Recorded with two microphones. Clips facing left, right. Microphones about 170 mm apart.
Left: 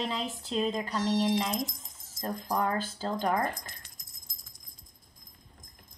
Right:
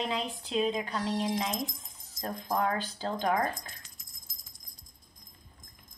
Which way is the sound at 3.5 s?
65° left (ahead or behind).